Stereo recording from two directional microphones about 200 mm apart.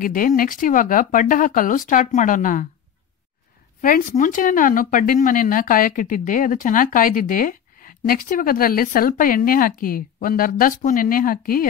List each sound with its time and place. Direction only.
0.0 s speech: 45° left (ahead or behind)
3.8 s speech: 40° left (ahead or behind)